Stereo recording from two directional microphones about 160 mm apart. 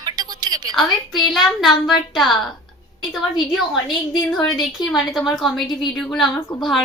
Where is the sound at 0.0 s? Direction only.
25° right (ahead or behind).